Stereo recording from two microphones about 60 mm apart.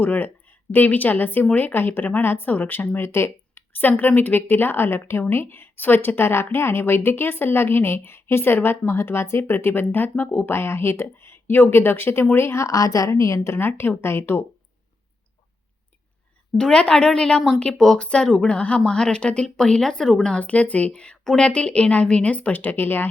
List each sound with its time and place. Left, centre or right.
0.0 s a woman's voice: left
12.7 s a woman's voice: left
16.6 s speech: centre
18.0 s a woman's voice: centre
20.4 s a woman's voice: left